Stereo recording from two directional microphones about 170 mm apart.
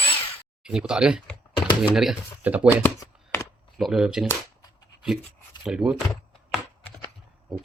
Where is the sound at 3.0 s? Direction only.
20° left (ahead or behind).